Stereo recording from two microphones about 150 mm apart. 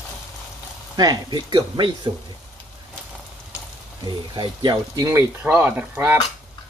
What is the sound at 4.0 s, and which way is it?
Speech, 30° right (ahead or behind).